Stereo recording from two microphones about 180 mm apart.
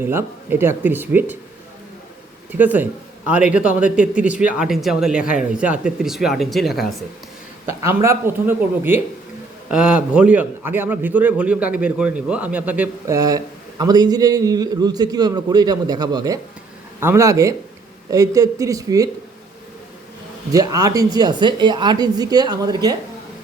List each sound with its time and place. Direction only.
0.0 s a man's voice: 10° right (ahead or behind)
2.5 s a man's voice: 10° right (ahead or behind)
7.7 s a man's voice: 15° right (ahead or behind)
13.1 s a man's voice: 20° right (ahead or behind)
20.5 s a man's voice: 20° right (ahead or behind)